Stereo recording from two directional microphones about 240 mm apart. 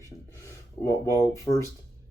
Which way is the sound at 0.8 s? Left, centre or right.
Centre.